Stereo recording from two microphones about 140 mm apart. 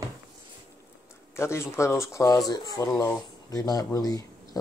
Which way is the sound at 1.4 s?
20° left (ahead or behind).